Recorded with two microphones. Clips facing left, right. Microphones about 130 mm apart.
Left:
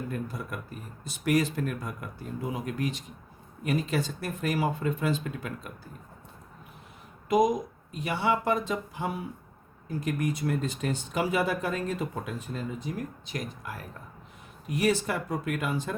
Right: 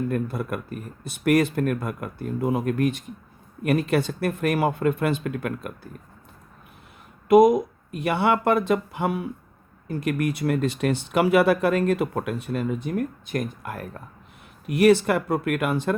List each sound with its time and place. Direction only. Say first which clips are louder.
0.1 s speech: right 8 dB; 60° right (ahead or behind)
7.3 s speech: right 9 dB; 60° right (ahead or behind)
14.7 s speech: right 9 dB; 70° right (ahead or behind)